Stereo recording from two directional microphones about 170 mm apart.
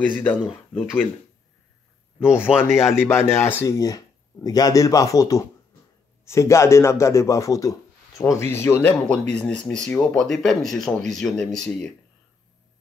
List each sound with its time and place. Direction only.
0.1 s a man's voice: 10° left (ahead or behind)
2.4 s speech: 5° right (ahead or behind)
2.9 s a man's voice: 15° left (ahead or behind)